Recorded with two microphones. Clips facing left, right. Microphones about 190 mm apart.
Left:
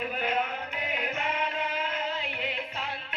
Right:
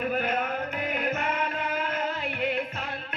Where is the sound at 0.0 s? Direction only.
50° right (ahead or behind).